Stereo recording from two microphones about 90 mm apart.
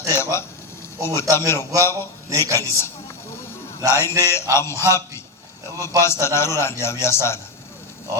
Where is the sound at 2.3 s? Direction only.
35° right (ahead or behind).